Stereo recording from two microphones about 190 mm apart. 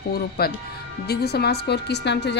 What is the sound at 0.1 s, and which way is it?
A woman's voice, 55° left (ahead or behind).